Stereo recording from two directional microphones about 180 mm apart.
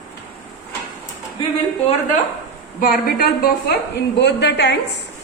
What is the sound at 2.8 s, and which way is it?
Speech, 55° left (ahead or behind).